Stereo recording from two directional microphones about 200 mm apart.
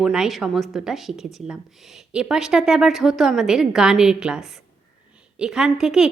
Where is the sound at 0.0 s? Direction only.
5° right (ahead or behind).